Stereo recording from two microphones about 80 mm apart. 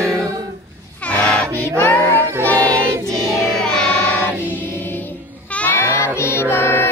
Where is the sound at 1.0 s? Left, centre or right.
Centre.